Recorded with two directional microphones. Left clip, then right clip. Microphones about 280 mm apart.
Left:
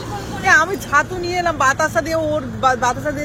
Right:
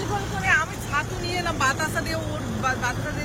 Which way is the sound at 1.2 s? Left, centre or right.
Centre.